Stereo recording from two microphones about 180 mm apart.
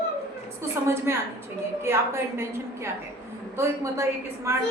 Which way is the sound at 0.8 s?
15° right (ahead or behind).